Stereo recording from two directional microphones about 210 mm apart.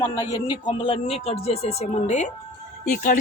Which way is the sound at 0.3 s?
20° left (ahead or behind).